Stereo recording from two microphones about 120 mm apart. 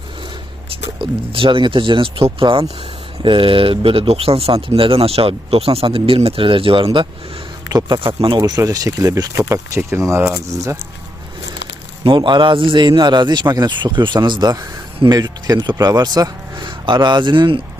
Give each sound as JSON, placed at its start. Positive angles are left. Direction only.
{"t": 0.9, "sound": "speech", "side_deg": -45}
{"t": 8.4, "sound": "speech", "side_deg": -30}
{"t": 12.0, "sound": "speech", "side_deg": -40}